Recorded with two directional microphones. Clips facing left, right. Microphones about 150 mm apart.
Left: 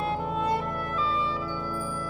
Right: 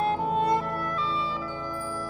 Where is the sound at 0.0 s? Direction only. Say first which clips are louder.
Right 3 dB; 35° right (ahead or behind).